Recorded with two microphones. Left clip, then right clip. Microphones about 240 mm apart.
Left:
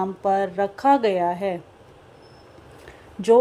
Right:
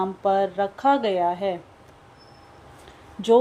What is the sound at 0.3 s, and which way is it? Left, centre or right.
Speech, centre.